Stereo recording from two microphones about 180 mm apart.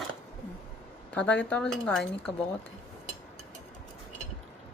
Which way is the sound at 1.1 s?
5° left (ahead or behind).